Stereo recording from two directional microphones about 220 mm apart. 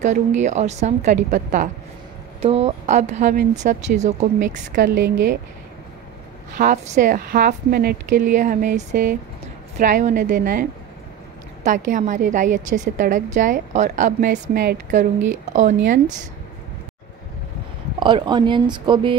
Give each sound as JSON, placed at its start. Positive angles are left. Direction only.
{"t": 0.0, "sound": "a woman's voice", "side_deg": -35}
{"t": 4.9, "sound": "speech", "side_deg": -50}
{"t": 6.6, "sound": "a woman's voice", "side_deg": -35}
{"t": 17.9, "sound": "speech", "side_deg": -20}